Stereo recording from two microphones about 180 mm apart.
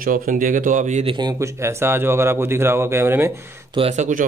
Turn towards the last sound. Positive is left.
turn(degrees=-45)  # may be behind; listen again after turning